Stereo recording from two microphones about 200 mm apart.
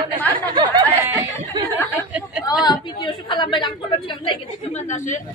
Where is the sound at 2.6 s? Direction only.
25° left (ahead or behind).